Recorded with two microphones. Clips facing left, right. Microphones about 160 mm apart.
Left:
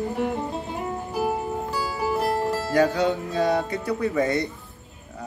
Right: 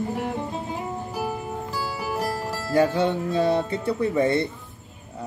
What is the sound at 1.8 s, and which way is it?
Music, 10° right (ahead or behind).